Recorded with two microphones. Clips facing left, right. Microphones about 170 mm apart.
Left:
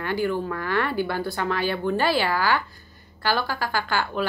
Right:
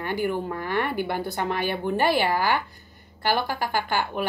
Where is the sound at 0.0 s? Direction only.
15° right (ahead or behind).